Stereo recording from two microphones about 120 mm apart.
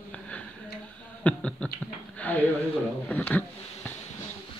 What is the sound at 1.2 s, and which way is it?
Speech, 10° left (ahead or behind).